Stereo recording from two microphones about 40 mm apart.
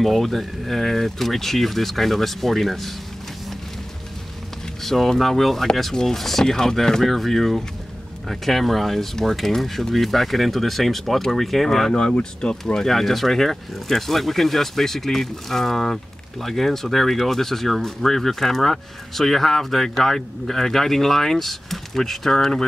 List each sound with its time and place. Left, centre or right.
0.0 s speech: centre
4.8 s speech: centre
12.1 s speech: centre
12.8 s speech: centre